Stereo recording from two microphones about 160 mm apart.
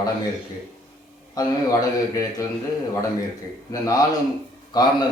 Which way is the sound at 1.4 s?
20° left (ahead or behind).